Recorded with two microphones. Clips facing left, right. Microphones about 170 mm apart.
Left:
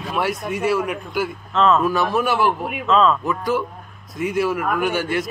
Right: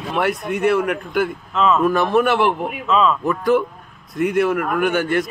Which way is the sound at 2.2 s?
60° right (ahead or behind).